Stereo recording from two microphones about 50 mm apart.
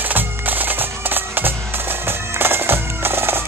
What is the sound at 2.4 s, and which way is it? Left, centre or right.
Bagpipes, right.